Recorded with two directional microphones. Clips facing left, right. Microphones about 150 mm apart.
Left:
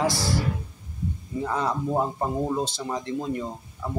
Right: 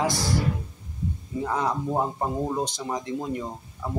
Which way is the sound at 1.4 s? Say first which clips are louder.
Even; 15° right (ahead or behind).